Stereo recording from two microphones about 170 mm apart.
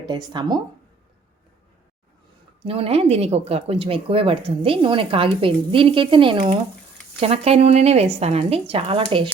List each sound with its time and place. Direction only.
0.0 s speech: 25° right (ahead or behind)
2.6 s speech: 35° right (ahead or behind)